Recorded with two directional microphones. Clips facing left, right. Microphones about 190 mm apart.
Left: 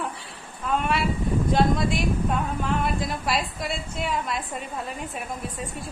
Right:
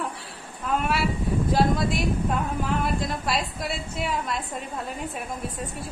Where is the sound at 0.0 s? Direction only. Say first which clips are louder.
Even; centre (ahead or behind).